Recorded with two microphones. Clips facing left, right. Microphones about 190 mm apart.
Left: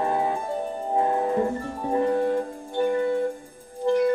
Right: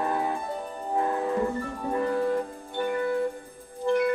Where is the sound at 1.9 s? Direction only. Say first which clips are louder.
Left 3 dB; 25° left (ahead or behind).